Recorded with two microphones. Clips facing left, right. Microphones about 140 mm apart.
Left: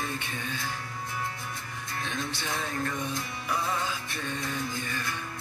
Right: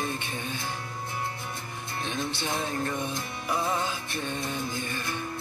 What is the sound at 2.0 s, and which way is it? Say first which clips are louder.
Music: right 3 dB; 25° right (ahead or behind).